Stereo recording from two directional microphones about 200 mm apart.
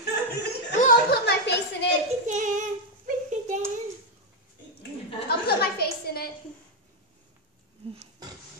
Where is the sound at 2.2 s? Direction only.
40° right (ahead or behind).